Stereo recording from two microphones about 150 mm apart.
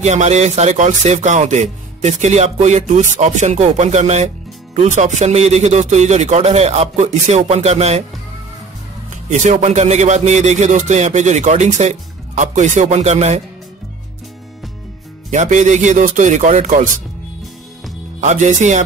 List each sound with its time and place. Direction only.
0.0 s speech: 50° right (ahead or behind)
9.3 s speech: 55° right (ahead or behind)
15.3 s speech: 55° right (ahead or behind)
18.2 s speech: 50° right (ahead or behind)